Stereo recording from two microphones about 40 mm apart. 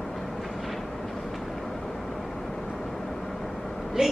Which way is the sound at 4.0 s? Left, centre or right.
Centre.